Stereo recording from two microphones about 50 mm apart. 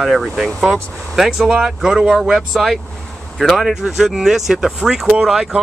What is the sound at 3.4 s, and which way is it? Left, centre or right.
Speech, centre.